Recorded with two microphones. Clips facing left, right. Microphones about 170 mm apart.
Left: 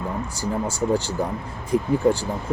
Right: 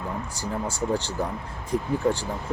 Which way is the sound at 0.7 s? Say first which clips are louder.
Left 4 dB; 5° left (ahead or behind).